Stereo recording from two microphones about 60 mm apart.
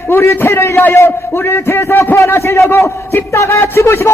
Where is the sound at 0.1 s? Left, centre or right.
Left.